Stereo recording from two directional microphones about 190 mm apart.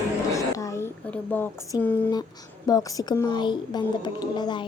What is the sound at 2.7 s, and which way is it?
Speech, 20° left (ahead or behind).